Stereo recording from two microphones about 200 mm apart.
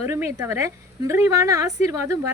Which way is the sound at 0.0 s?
15° right (ahead or behind).